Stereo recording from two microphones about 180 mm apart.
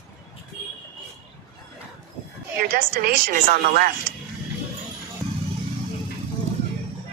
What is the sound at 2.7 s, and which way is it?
A woman's voice, 55° right (ahead or behind).